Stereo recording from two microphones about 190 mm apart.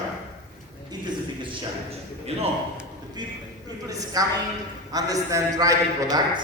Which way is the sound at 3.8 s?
20° right (ahead or behind).